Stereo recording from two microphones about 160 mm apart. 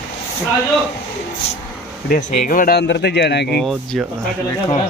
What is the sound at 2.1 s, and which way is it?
Speech, 60° left (ahead or behind).